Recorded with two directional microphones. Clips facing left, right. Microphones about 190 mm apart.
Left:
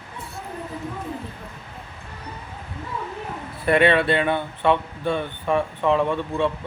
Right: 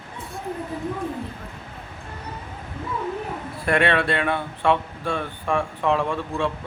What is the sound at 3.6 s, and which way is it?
Speech, centre (ahead or behind).